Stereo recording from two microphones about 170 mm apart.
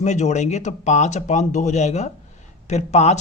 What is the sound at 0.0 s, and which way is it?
A man's voice, 45° left (ahead or behind).